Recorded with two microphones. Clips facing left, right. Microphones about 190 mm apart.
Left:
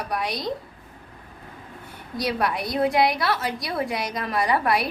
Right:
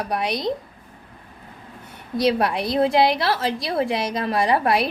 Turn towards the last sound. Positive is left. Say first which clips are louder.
# right 3 dB
turn(degrees=-25)  # may be behind; listen again after turning